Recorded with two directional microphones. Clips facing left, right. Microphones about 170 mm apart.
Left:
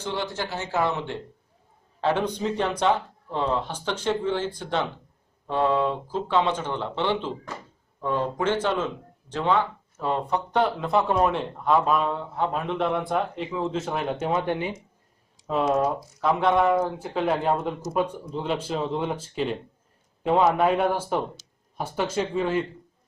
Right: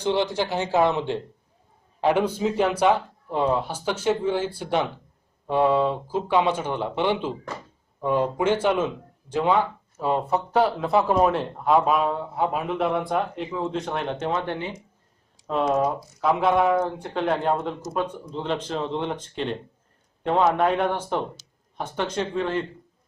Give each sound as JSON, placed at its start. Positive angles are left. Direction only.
{"t": 0.0, "sound": "speech", "side_deg": -20}
{"t": 15.4, "sound": "speech", "side_deg": 0}